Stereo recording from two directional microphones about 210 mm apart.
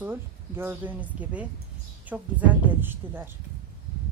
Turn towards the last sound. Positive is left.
turn(degrees=-10)  # may be behind; listen again after turning